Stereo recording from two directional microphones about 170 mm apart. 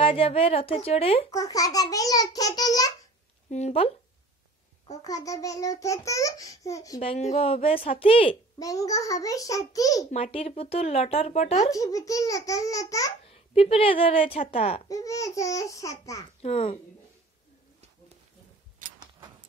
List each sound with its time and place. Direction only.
0.0 s speech: 30° left (ahead or behind)
1.3 s a child's voice: 20° left (ahead or behind)
3.4 s speech: 40° left (ahead or behind)
5.0 s a child's voice: 20° left (ahead or behind)
7.0 s speech: 35° left (ahead or behind)
8.5 s a child's voice: 20° left (ahead or behind)
10.1 s speech: 35° left (ahead or behind)
11.7 s a child's voice: 20° left (ahead or behind)
13.3 s a woman's voice: 35° left (ahead or behind)
14.4 s speech: 50° left (ahead or behind)
14.9 s a child's voice: 20° left (ahead or behind)
16.3 s speech: 35° left (ahead or behind)
18.9 s keys jangling: 25° right (ahead or behind)